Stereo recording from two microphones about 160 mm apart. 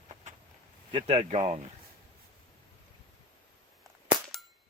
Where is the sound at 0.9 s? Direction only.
35° right (ahead or behind).